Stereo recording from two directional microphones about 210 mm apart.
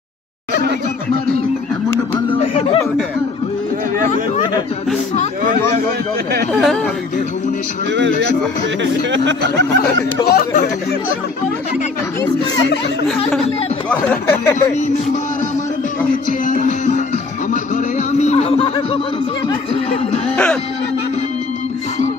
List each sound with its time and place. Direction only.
2.4 s a sound: 30° left (ahead or behind)
5.1 s speech: 35° left (ahead or behind)
6.5 s speech: centre (ahead or behind)
9.1 s speech: 60° right (ahead or behind)
10.2 s speech: 45° left (ahead or behind)
13.8 s speech: 10° left (ahead or behind)
16.3 s music: 40° left (ahead or behind)
19.4 s speech: 30° left (ahead or behind)